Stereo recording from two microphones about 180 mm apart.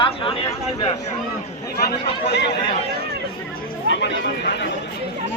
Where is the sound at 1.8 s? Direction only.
65° left (ahead or behind).